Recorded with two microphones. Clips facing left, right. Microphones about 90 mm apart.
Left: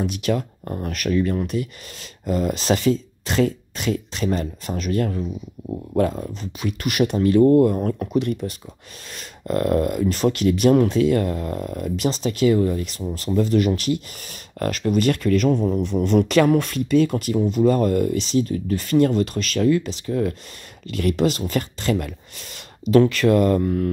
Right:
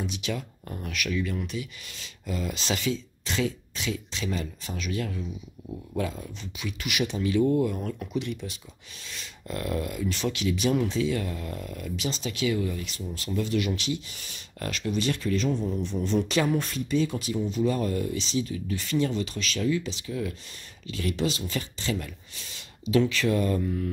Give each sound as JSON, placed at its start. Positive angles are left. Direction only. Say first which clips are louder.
{"t": 0.0, "sound": "speech", "louder": "left 9 dB", "side_deg": 50}